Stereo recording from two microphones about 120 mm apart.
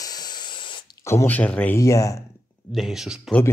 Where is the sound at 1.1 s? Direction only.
20° left (ahead or behind).